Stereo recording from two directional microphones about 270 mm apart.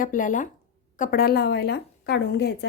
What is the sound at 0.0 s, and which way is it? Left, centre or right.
Speech, left.